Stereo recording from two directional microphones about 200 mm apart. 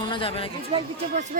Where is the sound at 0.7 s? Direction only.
30° right (ahead or behind).